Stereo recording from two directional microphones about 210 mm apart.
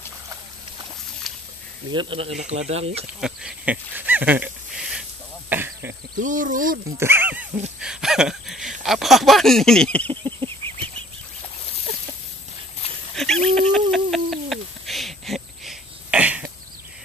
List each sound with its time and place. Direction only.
2.0 s speech: 25° right (ahead or behind)
3.2 s pig: 5° right (ahead or behind)
5.5 s a sound: 10° right (ahead or behind)
6.1 s speech: 40° right (ahead or behind)
7.0 s speech: 10° right (ahead or behind); by 10.1 s 5° left (ahead or behind)
13.1 s a sound: centre (ahead or behind)
13.6 s bird: 5° left (ahead or behind)